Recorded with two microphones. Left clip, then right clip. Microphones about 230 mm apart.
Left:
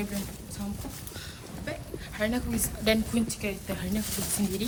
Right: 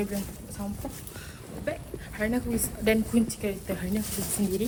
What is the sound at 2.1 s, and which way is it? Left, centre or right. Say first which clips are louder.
Speech: right 1 dB; centre.